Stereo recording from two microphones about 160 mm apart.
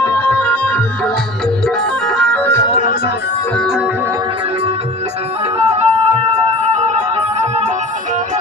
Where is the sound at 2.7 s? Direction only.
55° left (ahead or behind).